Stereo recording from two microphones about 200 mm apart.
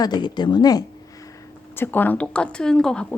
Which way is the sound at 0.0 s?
20° left (ahead or behind).